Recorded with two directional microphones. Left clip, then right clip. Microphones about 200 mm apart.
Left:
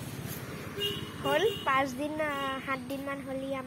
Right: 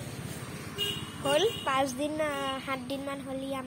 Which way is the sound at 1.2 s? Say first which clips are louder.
Right 1 dB; 15° right (ahead or behind).